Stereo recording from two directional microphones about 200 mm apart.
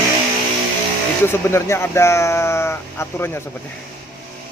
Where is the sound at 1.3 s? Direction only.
15° left (ahead or behind).